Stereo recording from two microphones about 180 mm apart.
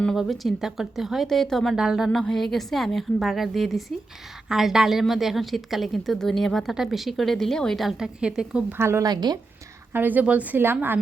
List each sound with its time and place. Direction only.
0.0 s a woman's voice: centre (ahead or behind); by 9.4 s 20° right (ahead or behind)
9.9 s speech: 10° right (ahead or behind)